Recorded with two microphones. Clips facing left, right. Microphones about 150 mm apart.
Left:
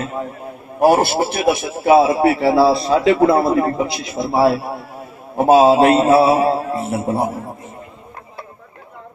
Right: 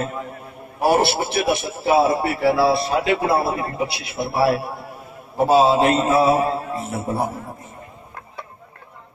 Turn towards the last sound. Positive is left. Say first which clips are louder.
# left 4 dB
turn(degrees=30)  # may be behind; listen again after turning